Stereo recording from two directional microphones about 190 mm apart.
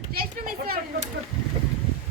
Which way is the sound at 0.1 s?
50° right (ahead or behind).